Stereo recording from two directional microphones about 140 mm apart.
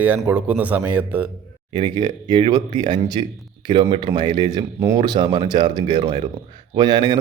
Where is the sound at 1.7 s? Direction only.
35° right (ahead or behind).